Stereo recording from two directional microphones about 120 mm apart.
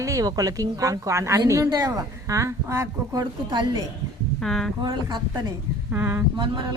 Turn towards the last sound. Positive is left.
turn(degrees=-40)  # may be behind; listen again after turning